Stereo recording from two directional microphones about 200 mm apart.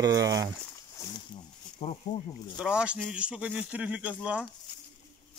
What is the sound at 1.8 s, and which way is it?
Speech, 30° left (ahead or behind).